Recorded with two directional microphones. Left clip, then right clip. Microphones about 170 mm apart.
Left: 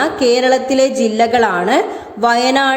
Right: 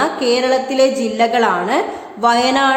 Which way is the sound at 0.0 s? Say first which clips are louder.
Left 3 dB; 20° left (ahead or behind).